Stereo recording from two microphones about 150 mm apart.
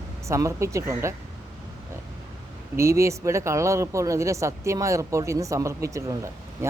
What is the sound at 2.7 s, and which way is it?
Speech, 20° right (ahead or behind).